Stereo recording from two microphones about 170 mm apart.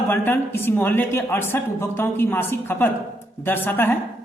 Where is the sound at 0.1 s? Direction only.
10° left (ahead or behind).